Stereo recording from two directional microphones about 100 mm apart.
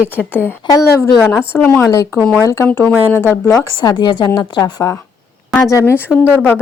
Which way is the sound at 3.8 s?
45° left (ahead or behind).